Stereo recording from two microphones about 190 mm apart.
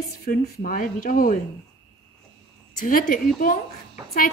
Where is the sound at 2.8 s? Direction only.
45° left (ahead or behind).